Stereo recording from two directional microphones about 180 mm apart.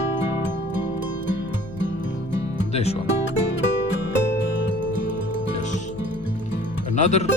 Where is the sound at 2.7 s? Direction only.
35° left (ahead or behind).